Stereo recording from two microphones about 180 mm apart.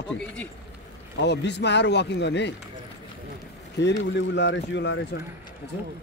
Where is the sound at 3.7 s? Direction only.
80° left.